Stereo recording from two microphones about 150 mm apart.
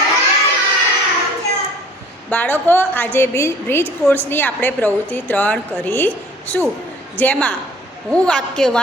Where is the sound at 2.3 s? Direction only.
10° left (ahead or behind).